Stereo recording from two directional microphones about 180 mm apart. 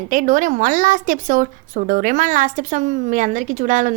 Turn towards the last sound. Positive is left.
turn(degrees=-45)  # may be behind; listen again after turning